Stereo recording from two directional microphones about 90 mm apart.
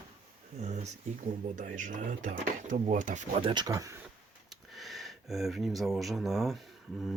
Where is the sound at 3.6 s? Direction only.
40° right (ahead or behind).